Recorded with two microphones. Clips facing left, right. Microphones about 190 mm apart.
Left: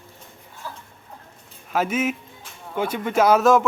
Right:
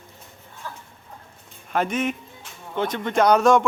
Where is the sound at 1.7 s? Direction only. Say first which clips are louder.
Left 1 dB; 5° left (ahead or behind).